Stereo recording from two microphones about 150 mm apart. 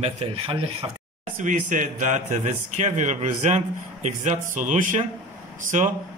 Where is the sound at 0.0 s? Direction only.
40° right (ahead or behind).